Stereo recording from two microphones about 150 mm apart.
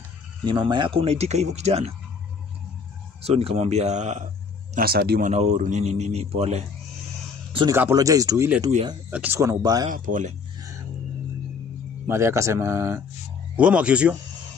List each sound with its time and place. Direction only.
0.5 s speech: 30° right (ahead or behind); by 1.9 s 45° right (ahead or behind)
3.3 s speech: 40° right (ahead or behind)
4.7 s speech: 90° right
5.3 s speech: 50° right (ahead or behind)
7.7 s speech: 20° right (ahead or behind)
9.8 s speech: 60° right (ahead or behind)
10.6 s music: 20° right (ahead or behind)
12.1 s speech: 20° right (ahead or behind)
13.6 s speech: 10° right (ahead or behind)